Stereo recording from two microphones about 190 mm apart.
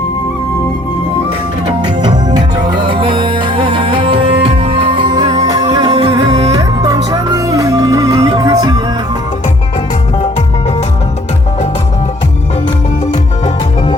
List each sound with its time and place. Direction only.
2.0 s music: 20° right (ahead or behind)